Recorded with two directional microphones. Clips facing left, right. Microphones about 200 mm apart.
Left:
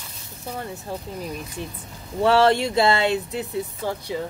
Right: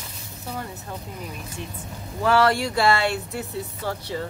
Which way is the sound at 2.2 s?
25° left (ahead or behind).